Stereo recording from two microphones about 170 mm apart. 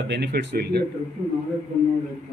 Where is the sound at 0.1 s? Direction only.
80° right.